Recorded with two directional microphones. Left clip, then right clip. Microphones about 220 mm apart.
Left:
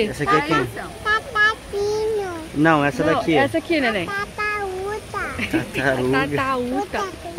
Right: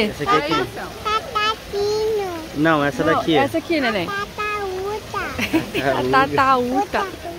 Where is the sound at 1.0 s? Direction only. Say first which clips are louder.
Left 2 dB; 5° left (ahead or behind).